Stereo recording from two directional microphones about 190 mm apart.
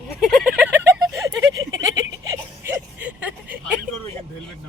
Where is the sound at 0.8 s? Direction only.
15° right (ahead or behind).